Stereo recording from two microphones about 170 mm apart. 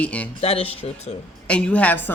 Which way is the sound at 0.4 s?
35° left (ahead or behind).